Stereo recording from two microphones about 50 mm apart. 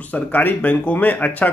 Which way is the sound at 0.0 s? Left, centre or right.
Left.